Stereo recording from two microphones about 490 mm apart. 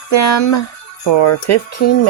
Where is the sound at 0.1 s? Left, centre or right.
Left.